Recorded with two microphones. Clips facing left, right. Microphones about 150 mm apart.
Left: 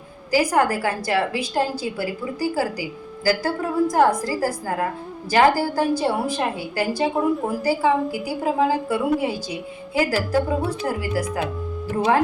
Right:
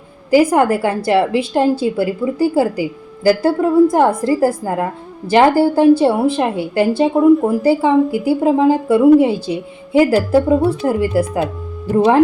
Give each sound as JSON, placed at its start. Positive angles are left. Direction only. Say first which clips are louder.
{"t": 0.3, "sound": "a woman's voice", "louder": "right 7 dB", "side_deg": -25}